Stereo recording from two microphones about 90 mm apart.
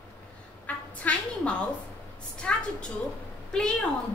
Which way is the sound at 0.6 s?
15° left (ahead or behind).